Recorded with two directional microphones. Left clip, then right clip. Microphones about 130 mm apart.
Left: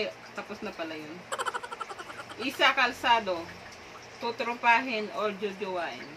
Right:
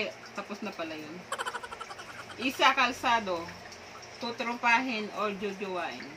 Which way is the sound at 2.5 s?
20° right (ahead or behind).